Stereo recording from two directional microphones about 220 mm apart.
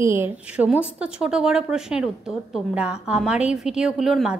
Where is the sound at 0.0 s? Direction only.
10° right (ahead or behind).